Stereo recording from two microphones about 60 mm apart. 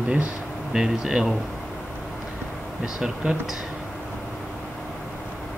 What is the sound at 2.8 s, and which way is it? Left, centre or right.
Speech, centre.